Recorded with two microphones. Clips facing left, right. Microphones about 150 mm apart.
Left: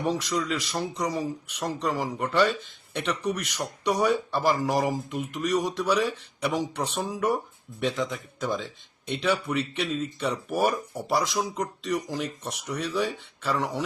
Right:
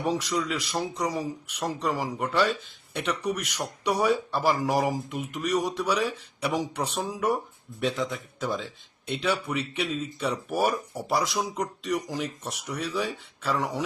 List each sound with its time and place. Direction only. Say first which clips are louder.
0.0 s speech: even; 5° right (ahead or behind)